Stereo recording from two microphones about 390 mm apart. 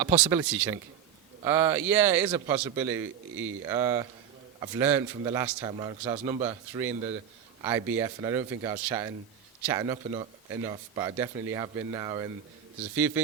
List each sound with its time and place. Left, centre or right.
0.0 s speech: centre
3.0 s speech: right
3.7 s a man's voice: centre